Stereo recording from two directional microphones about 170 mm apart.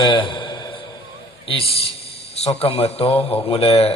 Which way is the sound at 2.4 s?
35° left (ahead or behind).